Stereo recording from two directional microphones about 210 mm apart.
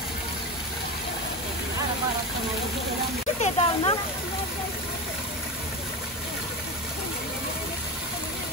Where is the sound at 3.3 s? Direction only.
30° left (ahead or behind).